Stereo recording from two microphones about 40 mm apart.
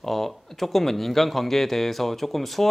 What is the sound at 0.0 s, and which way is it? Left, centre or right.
A man's voice, centre.